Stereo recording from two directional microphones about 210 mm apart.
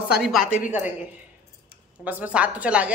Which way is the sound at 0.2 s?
Centre (ahead or behind).